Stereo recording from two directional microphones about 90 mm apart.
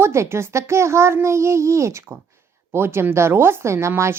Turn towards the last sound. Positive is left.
turn(degrees=-30)  # may be behind; listen again after turning